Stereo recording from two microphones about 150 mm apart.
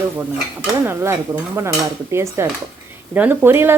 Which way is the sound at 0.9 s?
15° right (ahead or behind).